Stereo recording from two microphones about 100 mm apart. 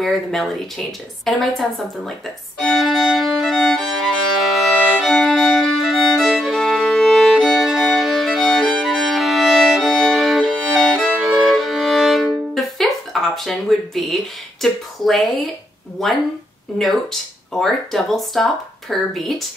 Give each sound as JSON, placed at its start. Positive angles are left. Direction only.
{"t": 0.0, "sound": "speech", "side_deg": 5}
{"t": 2.6, "sound": "violin", "side_deg": 0}
{"t": 16.0, "sound": "speech", "side_deg": 0}
{"t": 17.6, "sound": "speech", "side_deg": 0}